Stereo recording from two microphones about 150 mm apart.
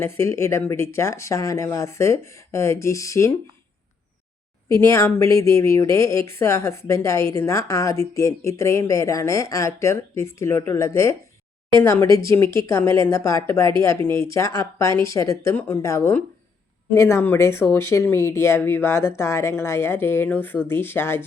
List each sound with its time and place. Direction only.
0.0 s speech: 20° left (ahead or behind)
4.7 s speech: 20° left (ahead or behind)